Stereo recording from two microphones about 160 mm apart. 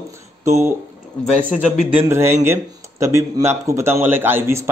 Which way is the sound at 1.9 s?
15° right (ahead or behind).